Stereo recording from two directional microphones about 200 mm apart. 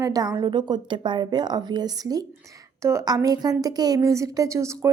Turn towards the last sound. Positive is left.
turn(degrees=-15)  # may be behind; listen again after turning